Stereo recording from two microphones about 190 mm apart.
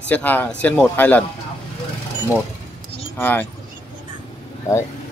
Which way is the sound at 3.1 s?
10° left (ahead or behind).